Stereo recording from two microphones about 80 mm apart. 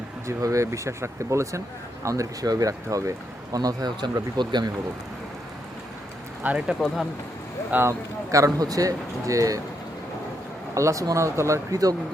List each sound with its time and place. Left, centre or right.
0.3 s speech: right
6.4 s speech: centre
6.7 s speech: centre
7.7 s speech: right
8.3 s speech: right
10.8 s speech: right